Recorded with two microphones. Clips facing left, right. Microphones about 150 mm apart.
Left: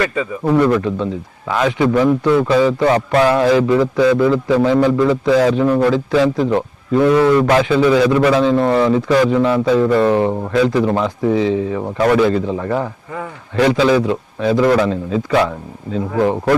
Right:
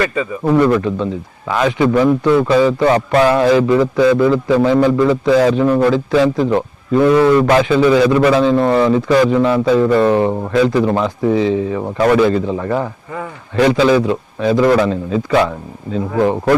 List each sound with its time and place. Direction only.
0.0 s speech: 15° right (ahead or behind)
0.5 s a man's voice: 25° right (ahead or behind)
1.9 s a man's voice: 30° right (ahead or behind); by 6.2 s 15° right (ahead or behind)
7.0 s a man's voice: 30° right (ahead or behind)
8.5 s speech: 35° right (ahead or behind)
8.9 s a man's voice: 20° right (ahead or behind)
11.3 s speech: 15° right (ahead or behind)
11.8 s speech: 30° right (ahead or behind)
12.1 s a man's voice: 20° right (ahead or behind)
14.5 s a man's voice: 30° right (ahead or behind)